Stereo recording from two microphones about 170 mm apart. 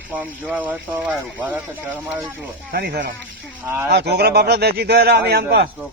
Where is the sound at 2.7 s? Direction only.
65° right (ahead or behind).